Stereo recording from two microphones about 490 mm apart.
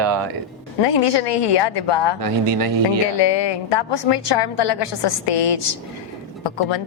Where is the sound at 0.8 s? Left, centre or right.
Left.